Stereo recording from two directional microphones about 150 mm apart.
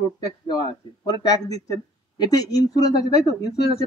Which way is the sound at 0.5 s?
30° left (ahead or behind).